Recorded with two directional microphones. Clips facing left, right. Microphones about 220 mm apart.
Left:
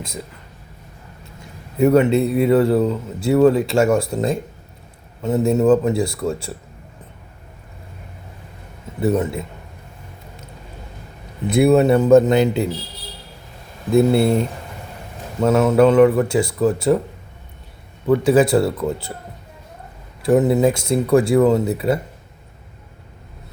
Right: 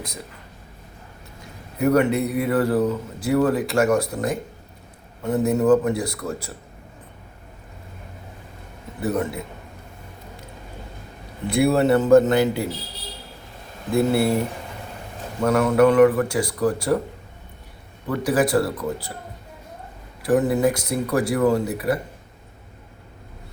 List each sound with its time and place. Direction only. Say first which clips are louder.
1.8 s a man's voice: left 4 dB; 25° left (ahead or behind)
9.0 s a man's voice: left 5 dB; 25° left (ahead or behind)
11.4 s a man's voice: left 4 dB; 20° left (ahead or behind)
13.9 s a man's voice: left 4 dB; 25° left (ahead or behind)
15.4 s a man's voice: left 3 dB; 25° left (ahead or behind)
18.2 s a man's voice: left 3 dB; 25° left (ahead or behind)
20.2 s a man's voice: left 4 dB; 25° left (ahead or behind)